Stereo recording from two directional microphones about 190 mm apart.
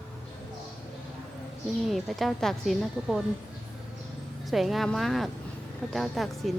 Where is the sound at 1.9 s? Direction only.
Centre (ahead or behind).